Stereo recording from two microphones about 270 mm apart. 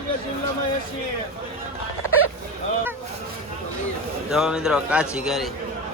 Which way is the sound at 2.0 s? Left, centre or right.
Left.